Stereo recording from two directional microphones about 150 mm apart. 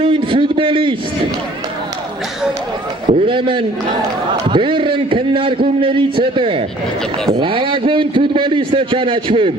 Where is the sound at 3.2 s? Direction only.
35° right (ahead or behind).